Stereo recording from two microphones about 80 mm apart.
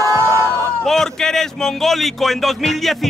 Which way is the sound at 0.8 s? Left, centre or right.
Centre.